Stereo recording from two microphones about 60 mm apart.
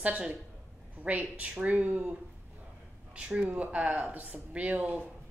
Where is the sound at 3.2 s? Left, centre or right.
Centre.